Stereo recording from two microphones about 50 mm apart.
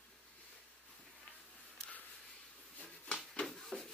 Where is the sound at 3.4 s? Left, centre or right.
Centre.